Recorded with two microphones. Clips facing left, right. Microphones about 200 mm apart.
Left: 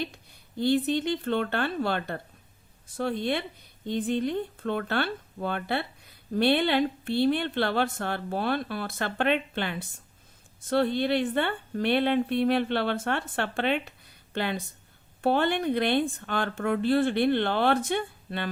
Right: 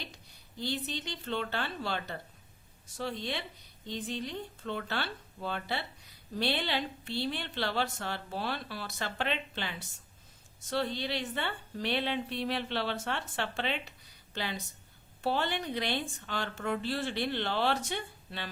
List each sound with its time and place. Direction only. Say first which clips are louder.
0.0 s a woman's voice: left 12 dB; 55° left (ahead or behind)